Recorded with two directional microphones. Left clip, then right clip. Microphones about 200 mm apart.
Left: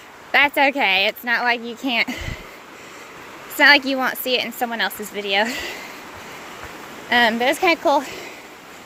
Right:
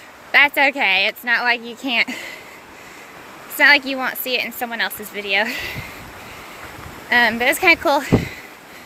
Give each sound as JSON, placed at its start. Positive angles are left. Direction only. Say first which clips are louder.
{"t": 0.3, "sound": "speech", "louder": "right 2 dB", "side_deg": 15}
{"t": 3.6, "sound": "speech", "louder": "even", "side_deg": 20}
{"t": 7.1, "sound": "speech", "louder": "right 1 dB", "side_deg": 15}